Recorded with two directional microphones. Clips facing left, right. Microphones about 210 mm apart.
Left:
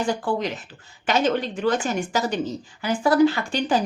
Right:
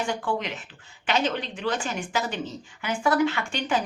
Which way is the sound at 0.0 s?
35° left (ahead or behind).